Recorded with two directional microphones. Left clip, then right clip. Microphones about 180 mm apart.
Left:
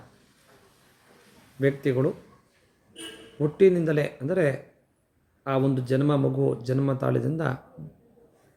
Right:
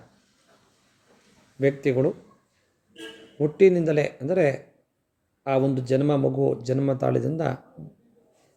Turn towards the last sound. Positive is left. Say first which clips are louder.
# right 2 dB
turn(degrees=-20)  # may be behind; listen again after turning